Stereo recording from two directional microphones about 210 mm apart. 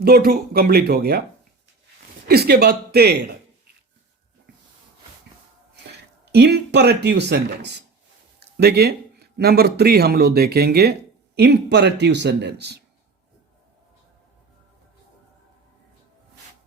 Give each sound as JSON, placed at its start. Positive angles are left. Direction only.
{"t": 0.0, "sound": "speech", "side_deg": -45}
{"t": 2.2, "sound": "speech", "side_deg": -50}
{"t": 5.7, "sound": "speech", "side_deg": -55}